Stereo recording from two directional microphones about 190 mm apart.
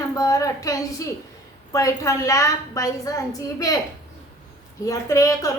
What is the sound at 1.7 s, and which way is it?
A woman's voice, 15° left (ahead or behind).